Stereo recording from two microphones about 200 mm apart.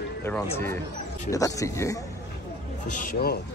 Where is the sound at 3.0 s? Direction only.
50° left (ahead or behind).